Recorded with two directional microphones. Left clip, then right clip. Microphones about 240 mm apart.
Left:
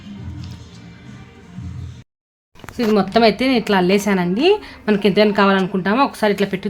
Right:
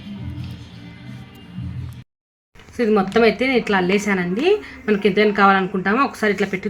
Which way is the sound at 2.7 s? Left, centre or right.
Left.